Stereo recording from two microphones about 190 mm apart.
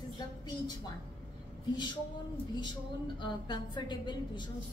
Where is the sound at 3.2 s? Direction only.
25° left (ahead or behind).